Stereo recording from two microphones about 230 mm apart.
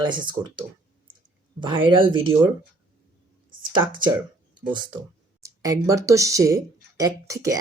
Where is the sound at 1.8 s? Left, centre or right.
Right.